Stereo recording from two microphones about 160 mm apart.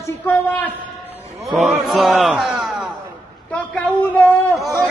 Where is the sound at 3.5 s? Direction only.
10° left (ahead or behind).